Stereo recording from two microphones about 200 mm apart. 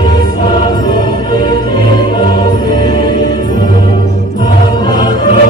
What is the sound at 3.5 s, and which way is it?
Music, 45° right (ahead or behind).